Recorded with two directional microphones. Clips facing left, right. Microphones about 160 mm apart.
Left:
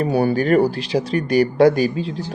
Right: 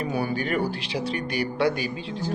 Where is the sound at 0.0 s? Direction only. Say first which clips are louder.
Left 9 dB; 35° left (ahead or behind).